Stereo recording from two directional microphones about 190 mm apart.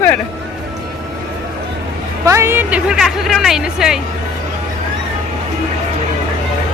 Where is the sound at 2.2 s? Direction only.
15° right (ahead or behind).